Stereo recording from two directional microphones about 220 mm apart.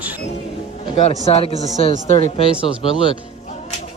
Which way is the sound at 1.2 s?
25° left (ahead or behind).